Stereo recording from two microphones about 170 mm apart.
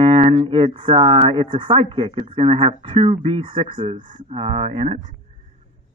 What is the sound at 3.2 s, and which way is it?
Speech, 30° right (ahead or behind).